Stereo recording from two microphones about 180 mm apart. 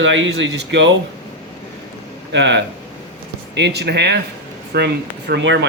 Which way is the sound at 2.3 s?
75° right (ahead or behind).